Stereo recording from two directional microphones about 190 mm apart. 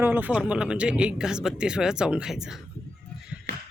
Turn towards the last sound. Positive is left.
turn(degrees=-60)  # may be behind; listen again after turning